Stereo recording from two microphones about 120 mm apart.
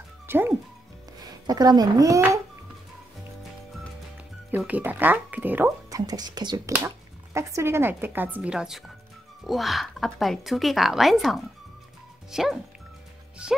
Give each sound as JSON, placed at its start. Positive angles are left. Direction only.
{"t": 0.3, "sound": "speech", "side_deg": -20}
{"t": 1.2, "sound": "speech", "side_deg": -35}
{"t": 4.5, "sound": "speech", "side_deg": -15}
{"t": 5.9, "sound": "a woman's voice", "side_deg": -30}